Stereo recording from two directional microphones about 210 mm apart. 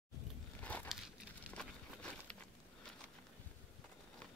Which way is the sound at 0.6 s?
5° left (ahead or behind).